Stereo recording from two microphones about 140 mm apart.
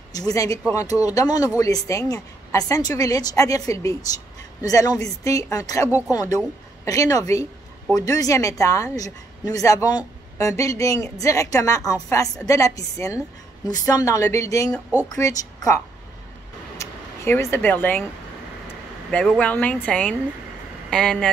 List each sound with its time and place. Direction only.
0.1 s a woman's voice: 25° left (ahead or behind)
16.7 s a sound: 20° left (ahead or behind)
19.0 s speech: 5° left (ahead or behind)